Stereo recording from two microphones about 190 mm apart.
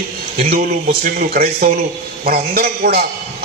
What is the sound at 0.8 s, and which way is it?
A man's voice, 45° right (ahead or behind).